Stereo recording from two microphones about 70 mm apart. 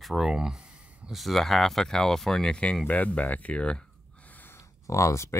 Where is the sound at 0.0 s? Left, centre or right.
Centre.